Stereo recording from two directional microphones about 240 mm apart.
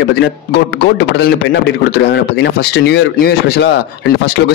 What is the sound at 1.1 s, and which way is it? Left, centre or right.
A man's voice, left.